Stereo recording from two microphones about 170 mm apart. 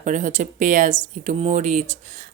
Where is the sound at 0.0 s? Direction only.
45° right (ahead or behind).